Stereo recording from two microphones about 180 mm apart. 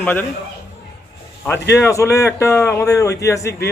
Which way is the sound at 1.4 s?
15° left (ahead or behind).